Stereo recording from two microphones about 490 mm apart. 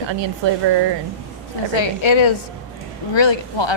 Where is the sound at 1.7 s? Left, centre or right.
Left.